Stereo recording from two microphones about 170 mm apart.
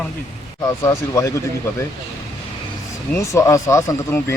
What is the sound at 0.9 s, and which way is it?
Speech, 20° left (ahead or behind).